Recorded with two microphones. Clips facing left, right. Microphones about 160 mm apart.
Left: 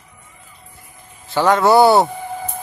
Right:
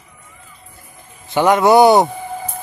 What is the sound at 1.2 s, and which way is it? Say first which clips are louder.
Speech: right 2 dB; 15° right (ahead or behind).